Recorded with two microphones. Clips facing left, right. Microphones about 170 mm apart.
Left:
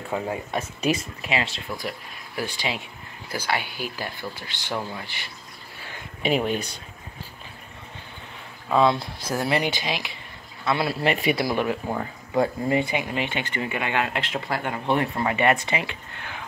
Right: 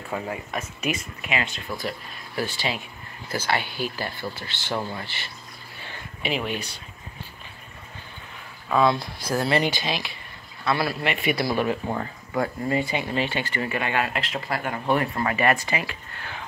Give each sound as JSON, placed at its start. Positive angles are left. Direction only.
{"t": 0.1, "sound": "speech", "side_deg": 20}
{"t": 0.5, "sound": "speech", "side_deg": 35}
{"t": 1.8, "sound": "speech", "side_deg": 15}
{"t": 6.2, "sound": "speech", "side_deg": 40}
{"t": 8.7, "sound": "a man's voice", "side_deg": 25}
{"t": 11.0, "sound": "speech", "side_deg": 35}
{"t": 11.3, "sound": "speech", "side_deg": 15}
{"t": 12.4, "sound": "speech", "side_deg": 20}
{"t": 14.1, "sound": "speech", "side_deg": 0}
{"t": 14.5, "sound": "speech", "side_deg": 20}